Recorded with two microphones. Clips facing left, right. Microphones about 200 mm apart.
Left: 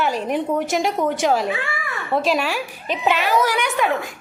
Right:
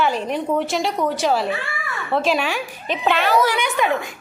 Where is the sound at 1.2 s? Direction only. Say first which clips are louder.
Left 1 dB; 15° left (ahead or behind).